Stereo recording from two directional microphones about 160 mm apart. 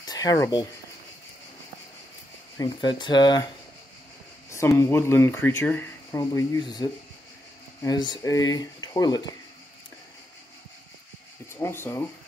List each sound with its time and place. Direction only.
0.0 s speech: 25° left (ahead or behind)
2.5 s speech: 25° left (ahead or behind)
4.5 s speech: 15° left (ahead or behind)
11.5 s speech: 15° left (ahead or behind)